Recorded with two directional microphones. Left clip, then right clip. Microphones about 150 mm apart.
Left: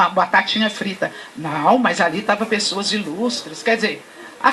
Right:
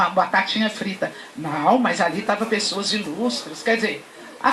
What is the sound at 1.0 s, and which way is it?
Speech, 25° left (ahead or behind).